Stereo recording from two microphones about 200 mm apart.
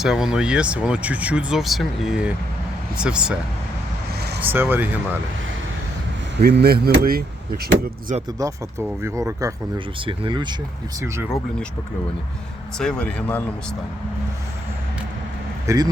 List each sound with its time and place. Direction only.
0.0 s speech: 5° right (ahead or behind)
4.4 s speech: 10° right (ahead or behind)
6.3 s speech: 55° right (ahead or behind)
8.4 s speech: 15° right (ahead or behind)
12.8 s speech: 5° left (ahead or behind)
15.6 s speech: 15° right (ahead or behind)